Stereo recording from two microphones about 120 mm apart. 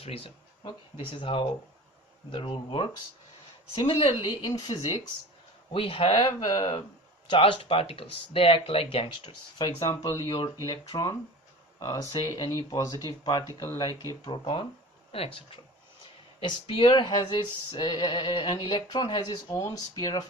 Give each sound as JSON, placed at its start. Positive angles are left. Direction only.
{"t": 0.6, "sound": "speech", "side_deg": 40}
{"t": 4.4, "sound": "male singing", "side_deg": 35}
{"t": 5.7, "sound": "male singing", "side_deg": 50}
{"t": 7.3, "sound": "speech", "side_deg": 45}
{"t": 10.2, "sound": "male singing", "side_deg": 30}
{"t": 12.3, "sound": "speech", "side_deg": 30}
{"t": 13.6, "sound": "male singing", "side_deg": 30}
{"t": 15.1, "sound": "speech", "side_deg": 50}
{"t": 16.4, "sound": "male singing", "side_deg": 45}
{"t": 19.5, "sound": "male singing", "side_deg": 25}